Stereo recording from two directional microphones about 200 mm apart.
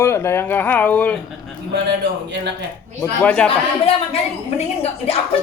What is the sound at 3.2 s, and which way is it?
Speech, 5° left (ahead or behind).